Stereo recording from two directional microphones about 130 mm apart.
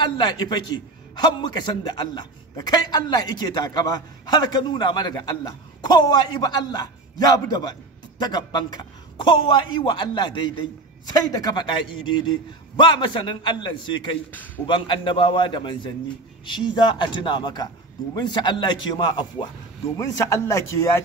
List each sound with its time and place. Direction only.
0.0 s a man's voice: 35° left (ahead or behind)